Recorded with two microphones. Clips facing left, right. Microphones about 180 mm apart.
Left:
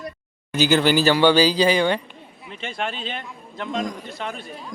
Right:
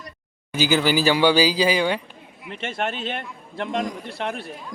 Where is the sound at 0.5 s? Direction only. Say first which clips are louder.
Left 2 dB; 10° right (ahead or behind).